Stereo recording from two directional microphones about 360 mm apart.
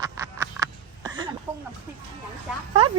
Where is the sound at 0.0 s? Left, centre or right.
Centre.